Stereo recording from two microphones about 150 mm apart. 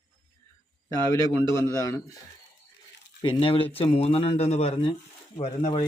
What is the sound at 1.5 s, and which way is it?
Speech, 20° left (ahead or behind).